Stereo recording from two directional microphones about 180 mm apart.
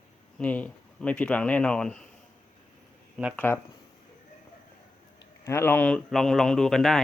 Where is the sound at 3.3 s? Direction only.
10° left (ahead or behind).